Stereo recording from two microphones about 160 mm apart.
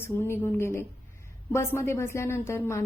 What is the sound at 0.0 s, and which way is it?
A woman's voice, 15° left (ahead or behind).